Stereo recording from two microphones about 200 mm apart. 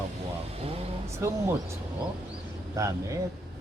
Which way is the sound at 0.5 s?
30° right (ahead or behind).